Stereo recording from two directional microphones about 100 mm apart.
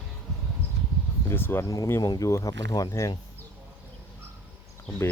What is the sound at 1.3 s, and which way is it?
Speech, 20° left (ahead or behind).